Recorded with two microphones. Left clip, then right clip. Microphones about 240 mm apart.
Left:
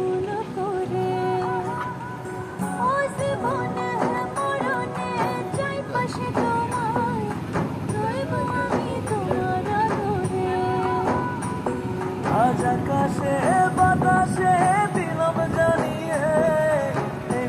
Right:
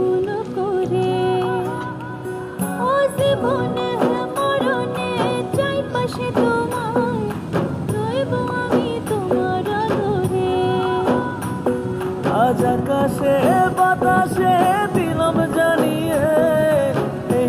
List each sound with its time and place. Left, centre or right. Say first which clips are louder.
2.9 s music: right 9 dB; right
3.4 s music: right 5 dB; right
4.6 s music: right 5 dB; right
9.3 s music: right 5 dB; right
12.3 s music: right 4 dB; right
15.0 s music: right 4 dB; right
16.1 s music: right 3 dB; right
16.8 s music: right 6 dB; right